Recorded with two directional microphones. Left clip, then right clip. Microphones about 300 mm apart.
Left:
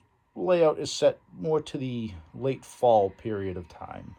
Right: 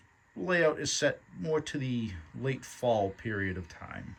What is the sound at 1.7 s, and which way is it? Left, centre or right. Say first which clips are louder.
Speech: left 2 dB; left.